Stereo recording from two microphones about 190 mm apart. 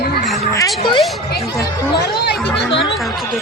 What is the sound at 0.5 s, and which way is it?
Speech, 20° left (ahead or behind).